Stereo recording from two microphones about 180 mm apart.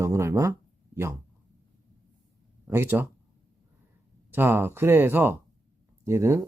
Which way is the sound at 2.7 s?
15° right (ahead or behind).